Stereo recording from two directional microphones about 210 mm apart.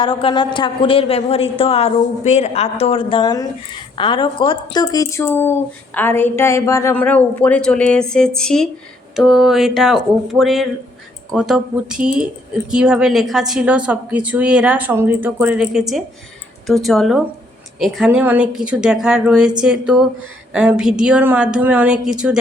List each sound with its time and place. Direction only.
0.0 s a woman's voice: 25° left (ahead or behind); by 22.4 s 5° right (ahead or behind)